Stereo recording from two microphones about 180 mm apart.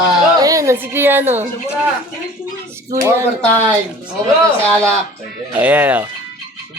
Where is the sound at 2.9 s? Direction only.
15° right (ahead or behind).